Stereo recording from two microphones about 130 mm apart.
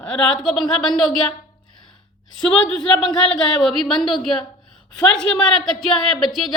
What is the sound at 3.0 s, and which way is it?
Speech, 35° left (ahead or behind).